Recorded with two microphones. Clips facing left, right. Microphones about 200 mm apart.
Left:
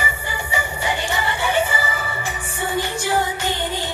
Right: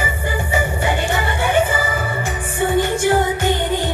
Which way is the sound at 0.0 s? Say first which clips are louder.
Right 5 dB; 50° right (ahead or behind).